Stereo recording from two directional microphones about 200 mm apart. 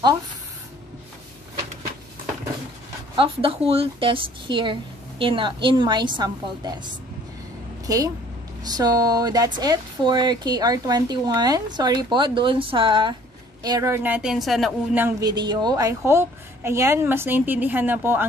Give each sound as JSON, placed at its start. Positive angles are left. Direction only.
{"t": 3.2, "sound": "a woman's voice", "side_deg": -25}
{"t": 15.0, "sound": "a woman's voice", "side_deg": -20}